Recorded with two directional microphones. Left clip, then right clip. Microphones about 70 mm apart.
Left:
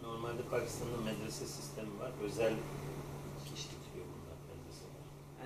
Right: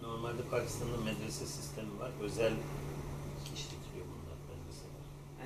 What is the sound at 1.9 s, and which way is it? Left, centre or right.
Speech, centre.